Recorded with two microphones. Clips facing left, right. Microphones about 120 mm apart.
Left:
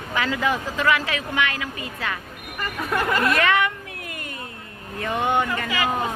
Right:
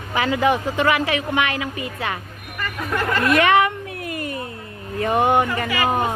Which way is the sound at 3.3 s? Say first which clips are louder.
Right 5 dB; 25° right (ahead or behind).